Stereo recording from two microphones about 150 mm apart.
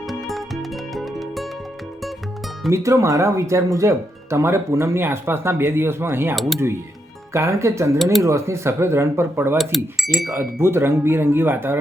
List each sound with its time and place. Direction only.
0.1 s music: centre (ahead or behind)
2.6 s speech: 20° right (ahead or behind)
6.3 s speech: centre (ahead or behind)
7.3 s speech: 20° right (ahead or behind)
9.6 s speech: centre (ahead or behind)
10.3 s speech: 15° right (ahead or behind)